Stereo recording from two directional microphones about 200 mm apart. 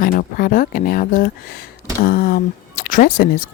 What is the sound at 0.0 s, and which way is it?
Speech, 45° left (ahead or behind).